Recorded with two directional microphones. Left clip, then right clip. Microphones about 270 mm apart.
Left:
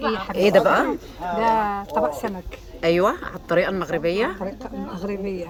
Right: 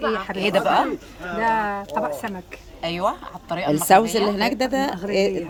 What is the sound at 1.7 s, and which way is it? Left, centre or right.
Speech, right.